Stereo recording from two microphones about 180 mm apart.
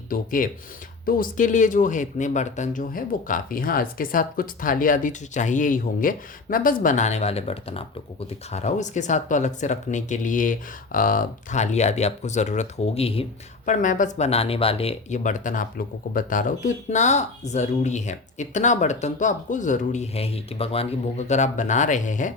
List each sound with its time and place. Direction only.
0.1 s speech: 50° left (ahead or behind); by 13.2 s 35° left (ahead or behind)
13.7 s speech: 45° left (ahead or behind)